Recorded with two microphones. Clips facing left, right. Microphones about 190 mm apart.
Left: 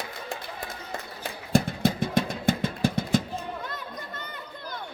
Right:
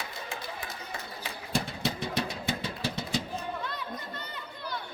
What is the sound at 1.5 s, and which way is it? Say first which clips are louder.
Vehicle: left 8 dB; 50° left (ahead or behind).